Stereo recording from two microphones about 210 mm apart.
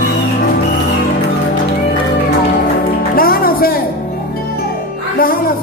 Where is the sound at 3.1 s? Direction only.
45° left (ahead or behind).